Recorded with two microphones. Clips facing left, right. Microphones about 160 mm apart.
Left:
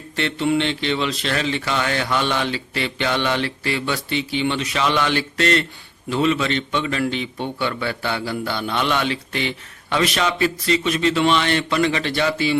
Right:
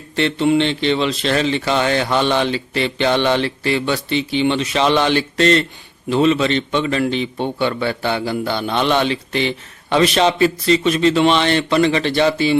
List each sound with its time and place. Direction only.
0.2 s a man's voice: 25° right (ahead or behind)